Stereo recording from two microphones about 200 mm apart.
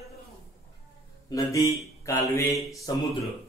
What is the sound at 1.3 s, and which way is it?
Mantra, 15° left (ahead or behind).